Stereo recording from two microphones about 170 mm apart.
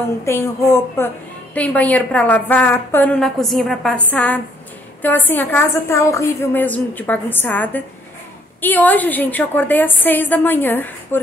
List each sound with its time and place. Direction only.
0.3 s a woman's voice: 15° left (ahead or behind)